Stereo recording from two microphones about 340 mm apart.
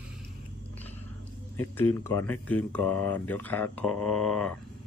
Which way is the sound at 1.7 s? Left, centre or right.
Centre.